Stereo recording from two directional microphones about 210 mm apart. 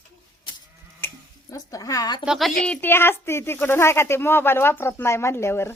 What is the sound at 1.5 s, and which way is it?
Speech, 15° left (ahead or behind).